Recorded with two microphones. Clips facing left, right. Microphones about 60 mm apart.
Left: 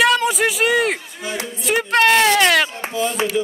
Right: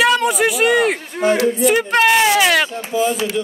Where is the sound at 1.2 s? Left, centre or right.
Right.